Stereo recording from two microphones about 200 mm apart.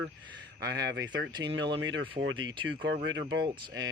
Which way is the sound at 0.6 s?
55° right (ahead or behind).